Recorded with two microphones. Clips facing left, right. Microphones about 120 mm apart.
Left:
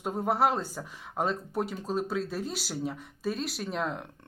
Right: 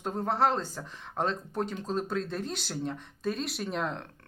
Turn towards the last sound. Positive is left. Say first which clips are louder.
# even
turn(degrees=0)  # may be behind; listen again after turning